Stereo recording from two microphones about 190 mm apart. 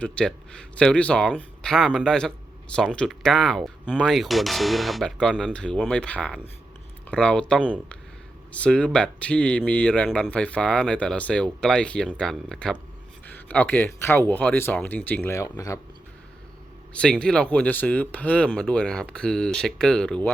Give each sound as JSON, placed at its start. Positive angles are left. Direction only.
{"t": 0.0, "sound": "speech", "side_deg": 5}
{"t": 16.9, "sound": "speech", "side_deg": 5}